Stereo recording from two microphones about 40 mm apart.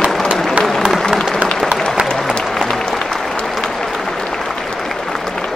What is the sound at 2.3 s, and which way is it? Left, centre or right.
Applause, centre.